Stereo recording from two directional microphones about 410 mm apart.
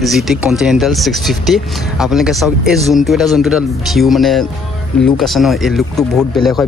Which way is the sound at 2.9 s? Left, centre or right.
Centre.